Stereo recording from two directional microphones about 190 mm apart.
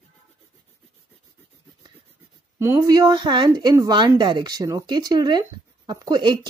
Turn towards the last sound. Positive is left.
turn(degrees=-20)  # may be behind; listen again after turning